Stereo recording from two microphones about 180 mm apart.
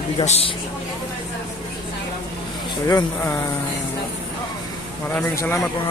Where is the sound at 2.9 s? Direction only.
15° left (ahead or behind).